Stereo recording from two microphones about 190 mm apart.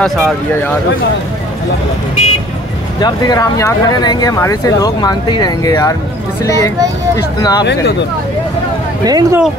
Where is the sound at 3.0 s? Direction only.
20° left (ahead or behind).